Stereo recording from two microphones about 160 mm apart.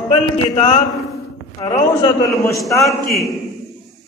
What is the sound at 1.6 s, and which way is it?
A man's voice, 20° left (ahead or behind).